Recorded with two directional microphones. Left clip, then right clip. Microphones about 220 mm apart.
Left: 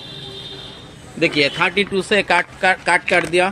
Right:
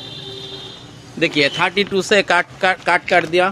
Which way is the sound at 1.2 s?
10° right (ahead or behind).